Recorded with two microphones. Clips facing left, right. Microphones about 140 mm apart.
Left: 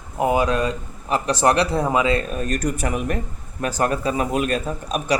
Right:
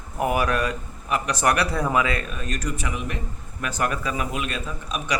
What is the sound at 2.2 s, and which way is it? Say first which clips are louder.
Speech: left 6 dB; 40° left (ahead or behind).